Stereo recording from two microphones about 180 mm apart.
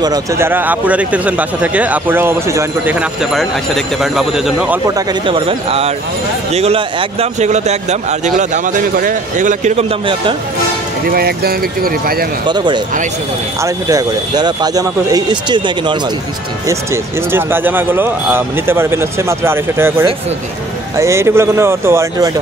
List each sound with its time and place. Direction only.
0.0 s speech: 20° right (ahead or behind); by 4.7 s 5° right (ahead or behind)
4.8 s a man's voice: 25° right (ahead or behind)
11.1 s speech: 60° right (ahead or behind)
12.4 s speech: 25° right (ahead or behind)
16.6 s speech: 15° right (ahead or behind)